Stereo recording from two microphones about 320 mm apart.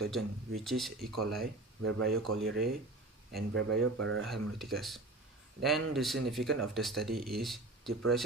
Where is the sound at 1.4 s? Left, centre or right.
Right.